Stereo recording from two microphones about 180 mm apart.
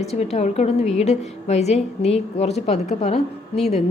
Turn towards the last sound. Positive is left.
turn(degrees=35)  # may be behind; listen again after turning